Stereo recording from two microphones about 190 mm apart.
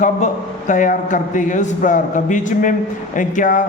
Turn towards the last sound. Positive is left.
turn(degrees=45)  # may be behind; listen again after turning